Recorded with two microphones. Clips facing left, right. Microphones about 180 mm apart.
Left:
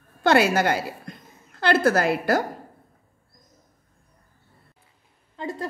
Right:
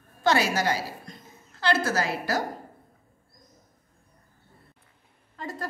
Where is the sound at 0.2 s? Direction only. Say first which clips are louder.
Left 5 dB; 60° left (ahead or behind).